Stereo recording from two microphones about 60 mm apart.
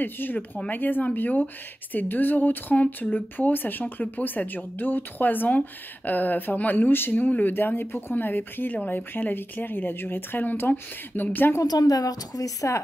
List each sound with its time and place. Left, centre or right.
0.0 s a woman's voice: left
11.6 s a woman's voice: left